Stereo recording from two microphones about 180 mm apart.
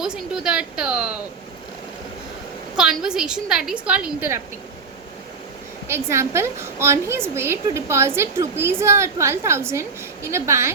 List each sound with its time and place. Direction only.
0.0 s a woman's voice: 5° right (ahead or behind)
2.7 s a woman's voice: 5° right (ahead or behind)
5.9 s a woman's voice: 15° right (ahead or behind)